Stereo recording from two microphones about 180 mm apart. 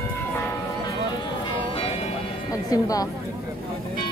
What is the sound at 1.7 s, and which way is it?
Music, 35° left (ahead or behind).